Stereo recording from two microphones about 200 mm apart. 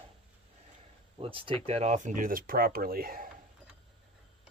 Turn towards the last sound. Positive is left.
turn(degrees=-45)  # may be behind; listen again after turning